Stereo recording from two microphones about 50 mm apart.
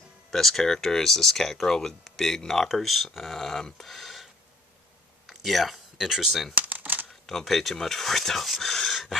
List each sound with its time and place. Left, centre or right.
0.3 s speech: centre
6.5 s shuffling cards: right
7.2 s speech: centre